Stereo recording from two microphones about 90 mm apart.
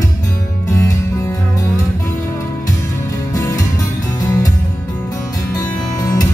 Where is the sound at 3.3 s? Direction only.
35° left (ahead or behind).